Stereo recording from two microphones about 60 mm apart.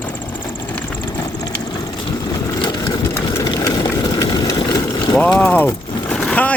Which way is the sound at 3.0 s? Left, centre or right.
Left.